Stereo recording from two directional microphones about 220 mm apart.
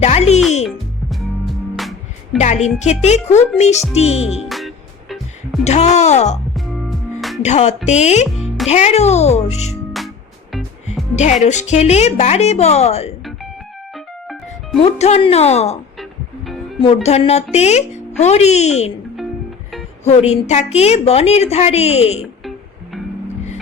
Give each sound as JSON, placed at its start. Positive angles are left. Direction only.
{"t": 0.0, "sound": "music", "side_deg": 30}
{"t": 1.7, "sound": "music", "side_deg": 0}
{"t": 2.4, "sound": "speech", "side_deg": 30}
{"t": 4.4, "sound": "music", "side_deg": 0}
{"t": 5.6, "sound": "speech", "side_deg": 30}
{"t": 6.5, "sound": "music", "side_deg": 0}
{"t": 7.4, "sound": "a woman's voice", "side_deg": 30}
{"t": 11.1, "sound": "speech", "side_deg": 30}
{"t": 13.9, "sound": "music", "side_deg": 0}
{"t": 14.9, "sound": "a woman's voice", "side_deg": 30}
{"t": 16.8, "sound": "a woman's voice", "side_deg": 30}
{"t": 20.1, "sound": "a woman's voice", "side_deg": 30}